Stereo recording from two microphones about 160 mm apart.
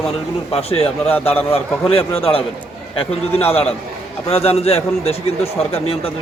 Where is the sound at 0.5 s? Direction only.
40° left (ahead or behind).